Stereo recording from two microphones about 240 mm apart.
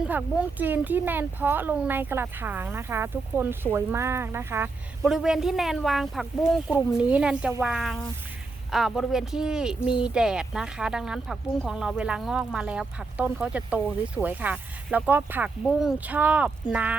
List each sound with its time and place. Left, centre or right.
0.0 s speech: centre